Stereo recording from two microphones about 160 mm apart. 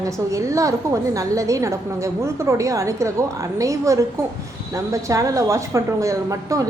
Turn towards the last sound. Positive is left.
turn(degrees=-20)  # may be behind; listen again after turning